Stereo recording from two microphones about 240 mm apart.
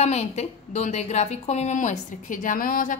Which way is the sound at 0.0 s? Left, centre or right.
Left.